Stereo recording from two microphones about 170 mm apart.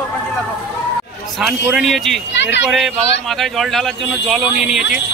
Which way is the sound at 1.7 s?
Centre (ahead or behind).